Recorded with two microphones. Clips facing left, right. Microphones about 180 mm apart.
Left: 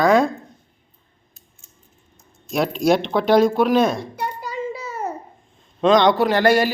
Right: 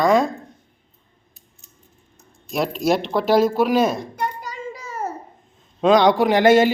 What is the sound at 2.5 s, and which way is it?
Speech, centre (ahead or behind).